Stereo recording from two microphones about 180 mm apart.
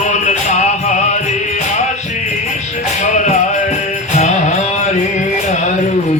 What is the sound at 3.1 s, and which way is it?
Music, 40° left (ahead or behind).